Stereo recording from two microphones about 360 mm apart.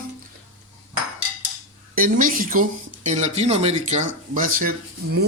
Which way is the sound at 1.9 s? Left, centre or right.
Right.